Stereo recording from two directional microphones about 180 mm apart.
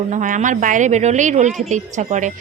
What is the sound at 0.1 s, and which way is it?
Speech, 45° right (ahead or behind).